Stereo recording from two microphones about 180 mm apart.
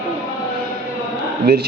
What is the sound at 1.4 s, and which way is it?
Speech, 55° right (ahead or behind).